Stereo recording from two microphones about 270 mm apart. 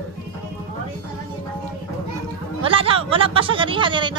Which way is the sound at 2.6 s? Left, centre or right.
Centre.